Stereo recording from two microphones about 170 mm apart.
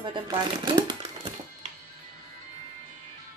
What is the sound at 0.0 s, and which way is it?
Speech, 25° right (ahead or behind).